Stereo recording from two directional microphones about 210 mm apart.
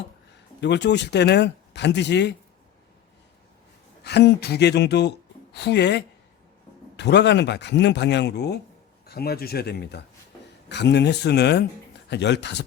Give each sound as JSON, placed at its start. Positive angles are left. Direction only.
{"t": 0.6, "sound": "speech", "side_deg": 55}
{"t": 4.0, "sound": "speech", "side_deg": 50}